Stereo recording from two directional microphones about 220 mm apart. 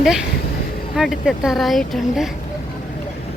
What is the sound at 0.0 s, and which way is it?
Speech, centre (ahead or behind).